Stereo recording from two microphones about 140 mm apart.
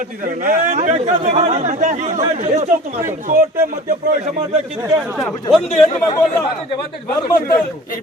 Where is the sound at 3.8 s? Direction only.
60° right (ahead or behind).